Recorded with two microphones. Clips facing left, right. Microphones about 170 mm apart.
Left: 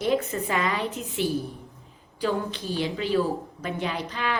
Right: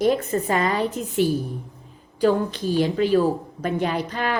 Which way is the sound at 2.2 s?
45° right (ahead or behind).